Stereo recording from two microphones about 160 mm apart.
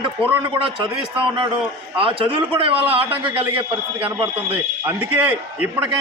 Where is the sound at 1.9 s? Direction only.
35° right (ahead or behind).